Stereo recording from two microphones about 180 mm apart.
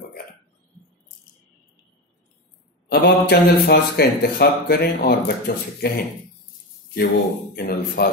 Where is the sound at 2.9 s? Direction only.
65° left (ahead or behind).